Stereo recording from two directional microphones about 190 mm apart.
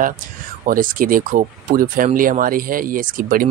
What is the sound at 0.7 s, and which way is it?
Speech, 45° right (ahead or behind).